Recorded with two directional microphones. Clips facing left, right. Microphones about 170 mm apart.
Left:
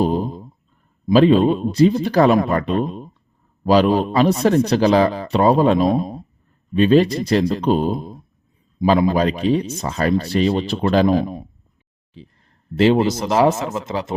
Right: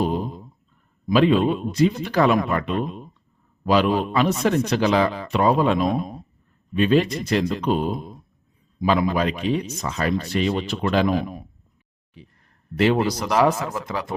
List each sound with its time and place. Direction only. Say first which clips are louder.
0.0 s a sound: left 4 dB; 35° left (ahead or behind)
1.0 s speech: left 5 dB; 35° left (ahead or behind)
12.7 s speech: left 4 dB; 30° left (ahead or behind)